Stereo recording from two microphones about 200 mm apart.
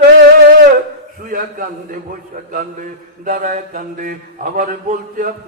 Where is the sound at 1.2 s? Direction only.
45° right (ahead or behind).